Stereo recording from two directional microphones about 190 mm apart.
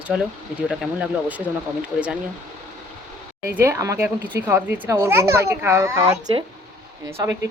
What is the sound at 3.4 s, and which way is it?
A child's voice, 15° right (ahead or behind).